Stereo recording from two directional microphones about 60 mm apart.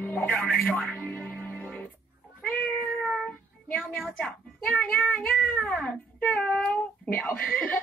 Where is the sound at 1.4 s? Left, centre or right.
Left.